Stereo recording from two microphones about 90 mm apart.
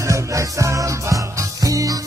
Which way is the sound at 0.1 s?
35° right (ahead or behind).